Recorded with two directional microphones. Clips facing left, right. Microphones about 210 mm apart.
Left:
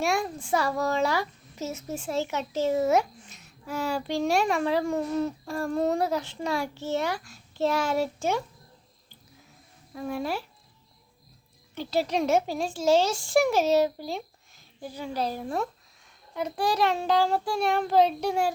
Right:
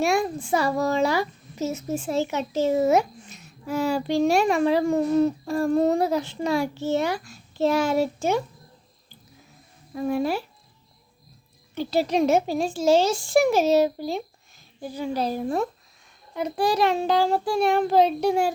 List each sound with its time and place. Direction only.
0.2 s a child's voice: 10° right (ahead or behind)
9.9 s a child's voice: 15° right (ahead or behind)
11.9 s a child's voice: 10° right (ahead or behind)
16.3 s a child's voice: 5° right (ahead or behind)